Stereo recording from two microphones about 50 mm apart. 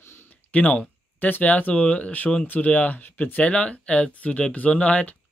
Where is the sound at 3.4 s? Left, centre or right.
Left.